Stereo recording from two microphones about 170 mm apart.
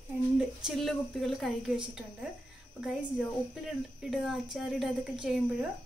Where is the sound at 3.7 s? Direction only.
Centre (ahead or behind).